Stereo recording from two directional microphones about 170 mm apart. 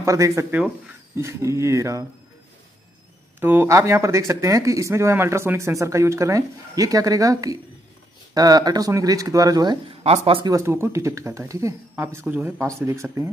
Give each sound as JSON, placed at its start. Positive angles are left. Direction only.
{"t": 0.0, "sound": "speech", "side_deg": -20}
{"t": 3.3, "sound": "speech", "side_deg": -15}
{"t": 10.0, "sound": "speech", "side_deg": -35}
{"t": 10.5, "sound": "speech", "side_deg": -15}